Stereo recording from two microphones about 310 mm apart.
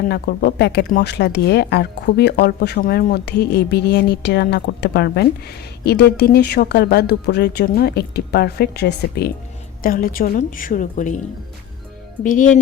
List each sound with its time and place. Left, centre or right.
0.1 s a woman's voice: left
12.2 s a woman's voice: left